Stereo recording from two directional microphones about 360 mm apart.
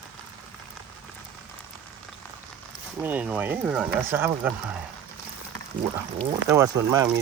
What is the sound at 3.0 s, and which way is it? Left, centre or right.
Speech, centre.